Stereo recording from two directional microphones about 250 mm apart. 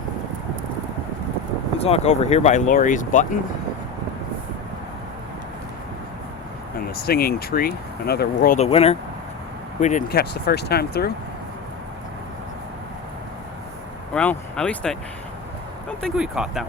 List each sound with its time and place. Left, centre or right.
1.8 s speech: left
6.9 s speech: left
8.5 s speech: left
9.8 s speech: left
14.1 s speech: centre